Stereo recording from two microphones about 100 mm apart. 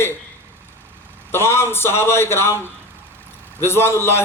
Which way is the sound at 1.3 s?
25° left (ahead or behind).